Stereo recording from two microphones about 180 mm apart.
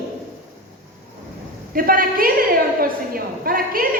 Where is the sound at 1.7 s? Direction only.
55° right (ahead or behind).